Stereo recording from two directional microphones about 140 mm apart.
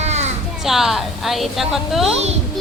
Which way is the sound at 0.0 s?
55° right (ahead or behind).